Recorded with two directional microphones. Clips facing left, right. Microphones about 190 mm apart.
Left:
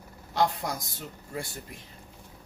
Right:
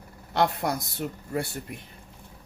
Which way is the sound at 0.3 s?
65° right (ahead or behind).